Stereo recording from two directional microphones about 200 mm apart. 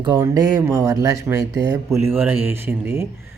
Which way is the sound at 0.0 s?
20° right (ahead or behind).